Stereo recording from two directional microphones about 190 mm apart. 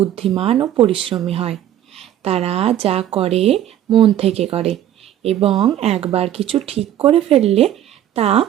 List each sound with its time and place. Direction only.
0.3 s speech: 30° right (ahead or behind)